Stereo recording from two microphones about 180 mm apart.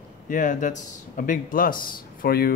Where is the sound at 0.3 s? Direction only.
45° left (ahead or behind).